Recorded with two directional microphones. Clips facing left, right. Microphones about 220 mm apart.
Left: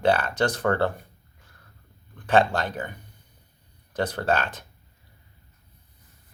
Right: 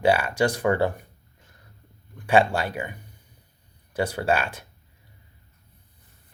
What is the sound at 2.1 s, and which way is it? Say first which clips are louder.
Speech: right 1 dB; 10° right (ahead or behind).